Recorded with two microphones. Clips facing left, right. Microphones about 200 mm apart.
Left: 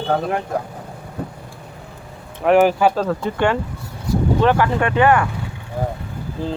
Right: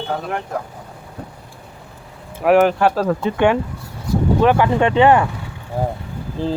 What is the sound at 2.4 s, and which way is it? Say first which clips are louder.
Speech: even; centre (ahead or behind).